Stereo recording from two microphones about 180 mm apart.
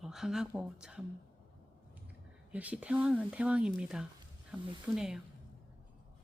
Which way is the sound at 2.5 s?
10° right (ahead or behind).